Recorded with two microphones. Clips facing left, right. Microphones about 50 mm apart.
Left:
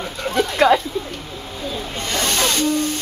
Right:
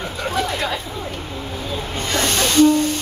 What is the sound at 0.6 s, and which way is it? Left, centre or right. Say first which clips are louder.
Speech: left 10 dB; left.